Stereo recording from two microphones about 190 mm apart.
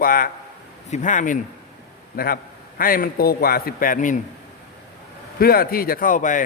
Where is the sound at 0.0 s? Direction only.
45° left (ahead or behind).